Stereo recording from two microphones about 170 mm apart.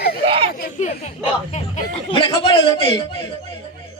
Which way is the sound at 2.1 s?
30° left (ahead or behind).